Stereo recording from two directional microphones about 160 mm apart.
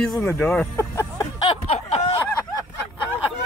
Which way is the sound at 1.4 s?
40° left (ahead or behind).